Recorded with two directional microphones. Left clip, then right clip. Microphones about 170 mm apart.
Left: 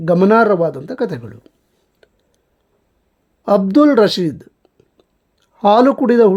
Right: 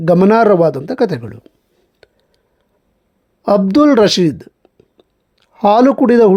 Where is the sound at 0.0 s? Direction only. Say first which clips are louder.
Right 2 dB; 15° right (ahead or behind).